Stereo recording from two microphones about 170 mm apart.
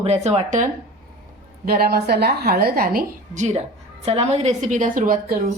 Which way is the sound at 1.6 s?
65° right (ahead or behind).